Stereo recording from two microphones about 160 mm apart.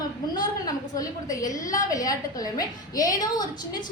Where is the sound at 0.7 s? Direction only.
20° left (ahead or behind).